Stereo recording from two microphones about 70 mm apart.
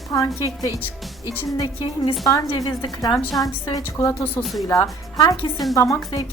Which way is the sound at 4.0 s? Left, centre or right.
Left.